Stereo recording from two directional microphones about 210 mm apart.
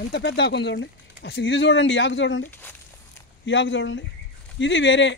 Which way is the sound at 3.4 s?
60° left (ahead or behind).